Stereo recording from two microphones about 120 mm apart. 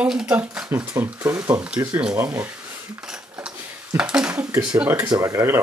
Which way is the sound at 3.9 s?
10° right (ahead or behind).